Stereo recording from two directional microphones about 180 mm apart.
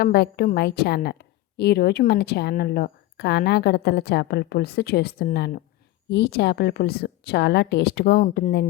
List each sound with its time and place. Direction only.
0.0 s a woman's voice: 60° left (ahead or behind)